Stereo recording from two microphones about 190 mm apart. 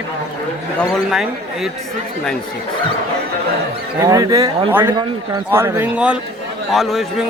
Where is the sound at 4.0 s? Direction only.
20° right (ahead or behind); by 7.2 s centre (ahead or behind).